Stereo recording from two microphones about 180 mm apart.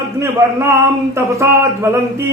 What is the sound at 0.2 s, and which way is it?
Speech, 15° right (ahead or behind).